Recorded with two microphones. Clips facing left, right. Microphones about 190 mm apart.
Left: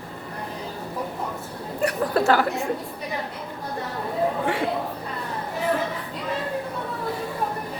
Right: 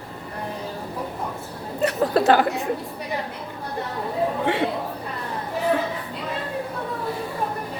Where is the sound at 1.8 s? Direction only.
20° right (ahead or behind).